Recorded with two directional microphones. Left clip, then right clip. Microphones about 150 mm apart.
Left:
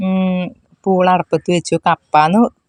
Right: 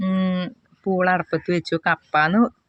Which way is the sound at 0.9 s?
40° left (ahead or behind).